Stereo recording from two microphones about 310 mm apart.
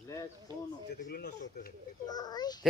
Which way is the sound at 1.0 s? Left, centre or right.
Left.